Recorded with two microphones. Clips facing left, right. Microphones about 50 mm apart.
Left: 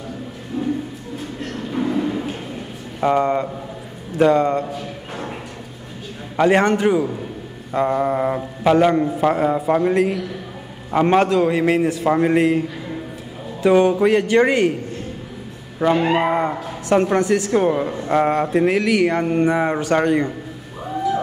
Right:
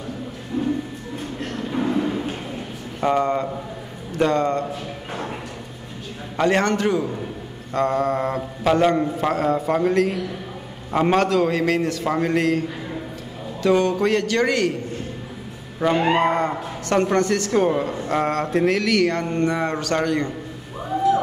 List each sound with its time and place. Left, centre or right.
1.7 s a sound: centre
3.0 s a man's voice: centre
6.3 s a man's voice: centre
9.3 s a man's voice: centre
9.6 s a man's voice: centre; by 14.7 s left
15.8 s a man's voice: centre